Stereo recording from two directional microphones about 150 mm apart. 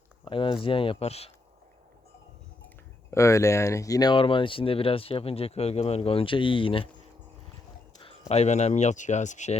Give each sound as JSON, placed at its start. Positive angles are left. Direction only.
{"t": 0.3, "sound": "speech", "side_deg": 35}
{"t": 3.1, "sound": "speech", "side_deg": 20}
{"t": 7.9, "sound": "a sound", "side_deg": 35}
{"t": 8.3, "sound": "speech", "side_deg": 45}